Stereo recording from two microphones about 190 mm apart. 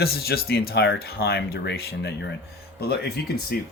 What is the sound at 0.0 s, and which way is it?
Speech, 55° left (ahead or behind).